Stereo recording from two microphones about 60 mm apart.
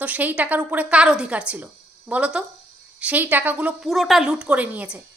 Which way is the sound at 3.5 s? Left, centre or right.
Centre.